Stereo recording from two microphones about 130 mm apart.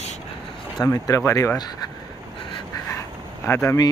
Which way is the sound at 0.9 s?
20° left (ahead or behind).